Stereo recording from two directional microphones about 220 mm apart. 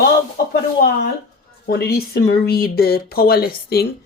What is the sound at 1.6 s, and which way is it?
Speech, 45° left (ahead or behind).